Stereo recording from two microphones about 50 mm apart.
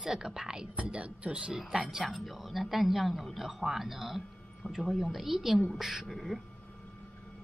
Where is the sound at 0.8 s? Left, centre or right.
Right.